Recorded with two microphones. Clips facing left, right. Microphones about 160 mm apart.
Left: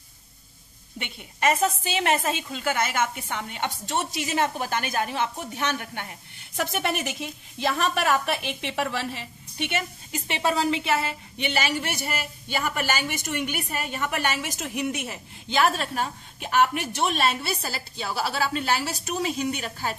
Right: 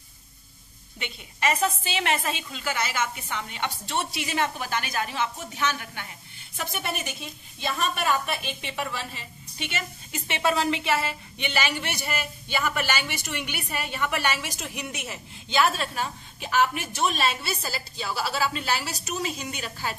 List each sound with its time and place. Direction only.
0.9 s a woman's voice: 50° left (ahead or behind)
10.1 s a woman's voice: 35° left (ahead or behind); by 19.9 s 55° left (ahead or behind)